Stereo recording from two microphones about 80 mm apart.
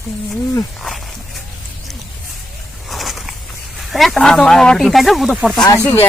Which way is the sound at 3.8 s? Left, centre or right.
Centre.